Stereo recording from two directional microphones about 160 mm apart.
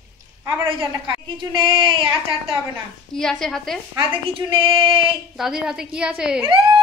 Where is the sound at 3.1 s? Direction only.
5° left (ahead or behind).